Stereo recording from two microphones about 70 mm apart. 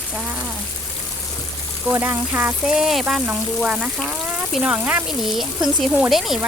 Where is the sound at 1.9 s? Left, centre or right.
Right.